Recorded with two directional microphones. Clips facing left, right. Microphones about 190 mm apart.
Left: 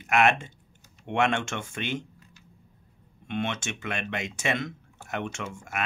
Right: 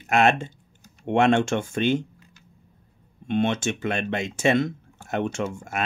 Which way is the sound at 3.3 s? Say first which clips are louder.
Right 8 dB; 35° right (ahead or behind).